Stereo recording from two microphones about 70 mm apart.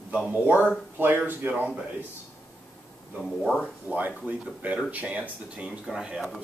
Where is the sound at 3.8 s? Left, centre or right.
Right.